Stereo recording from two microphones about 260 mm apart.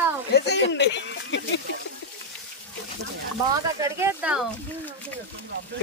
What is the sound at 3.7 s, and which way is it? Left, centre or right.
Speech, centre.